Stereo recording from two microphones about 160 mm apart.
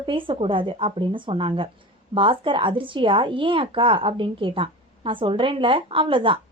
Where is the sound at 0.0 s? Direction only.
30° right (ahead or behind).